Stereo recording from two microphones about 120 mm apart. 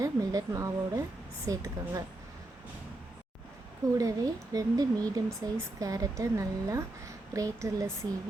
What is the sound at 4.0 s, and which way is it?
Speech, 30° right (ahead or behind).